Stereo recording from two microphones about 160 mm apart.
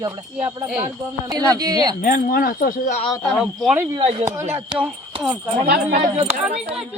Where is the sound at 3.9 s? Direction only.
35° right (ahead or behind).